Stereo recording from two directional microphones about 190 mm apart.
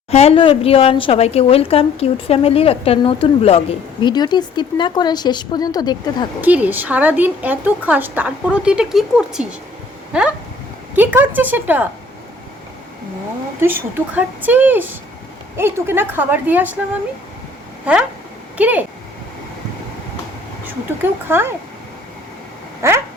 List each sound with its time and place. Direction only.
0.1 s a woman's voice: 30° left (ahead or behind)
6.4 s speech: 10° right (ahead or behind)
10.1 s a sound: 5° right (ahead or behind)
10.9 s speech: 10° right (ahead or behind)
13.6 s speech: 10° right (ahead or behind)
17.9 s a sound: 5° right (ahead or behind)
18.5 s speech: 10° right (ahead or behind)
20.7 s speech: 10° right (ahead or behind)
22.8 s speech: 15° right (ahead or behind)